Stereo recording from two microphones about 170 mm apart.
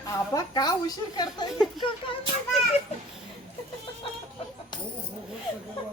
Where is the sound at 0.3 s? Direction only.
25° left (ahead or behind).